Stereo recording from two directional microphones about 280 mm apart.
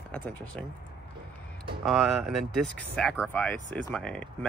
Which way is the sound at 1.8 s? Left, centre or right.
Centre.